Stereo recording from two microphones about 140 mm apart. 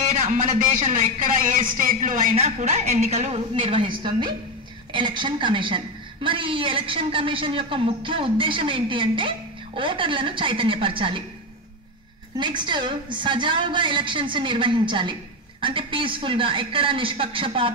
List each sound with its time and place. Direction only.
0.1 s a man's voice: 65° right (ahead or behind)
2.3 s a woman's voice: 50° right (ahead or behind)
12.4 s a man's voice: 35° right (ahead or behind)